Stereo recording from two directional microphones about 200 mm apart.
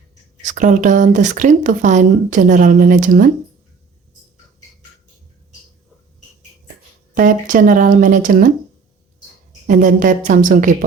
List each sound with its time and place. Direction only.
0.4 s speech: 40° right (ahead or behind)
7.1 s speech: 40° right (ahead or behind)
9.6 s speech: 40° right (ahead or behind)